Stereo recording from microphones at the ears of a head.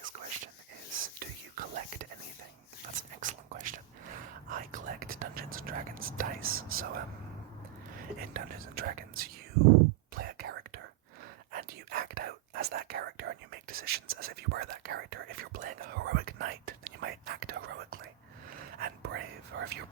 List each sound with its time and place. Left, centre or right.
0.0 s whispering: right